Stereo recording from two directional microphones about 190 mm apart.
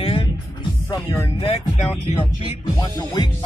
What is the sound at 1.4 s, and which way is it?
Speech, 35° left (ahead or behind).